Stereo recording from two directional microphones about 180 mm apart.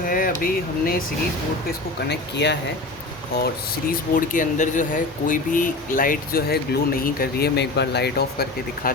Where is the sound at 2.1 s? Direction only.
70° left (ahead or behind).